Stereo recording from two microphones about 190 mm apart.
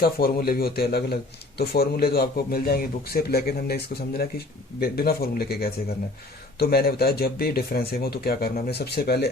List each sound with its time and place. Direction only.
0.0 s a man's voice: 50° left (ahead or behind)
4.8 s a man's voice: 55° left (ahead or behind)